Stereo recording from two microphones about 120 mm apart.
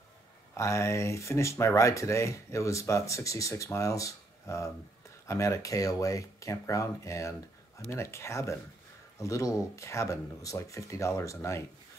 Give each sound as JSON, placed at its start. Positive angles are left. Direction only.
{"t": 0.6, "sound": "speech", "side_deg": 25}